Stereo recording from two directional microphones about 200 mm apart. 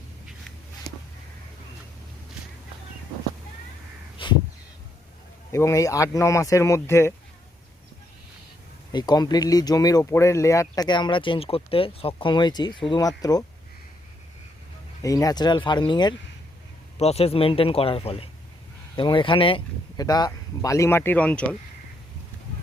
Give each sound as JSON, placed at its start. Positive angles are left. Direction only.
{"t": 4.2, "sound": "crow", "side_deg": 25}
{"t": 5.5, "sound": "speech", "side_deg": 15}
{"t": 8.9, "sound": "speech", "side_deg": 20}
{"t": 15.0, "sound": "speech", "side_deg": 15}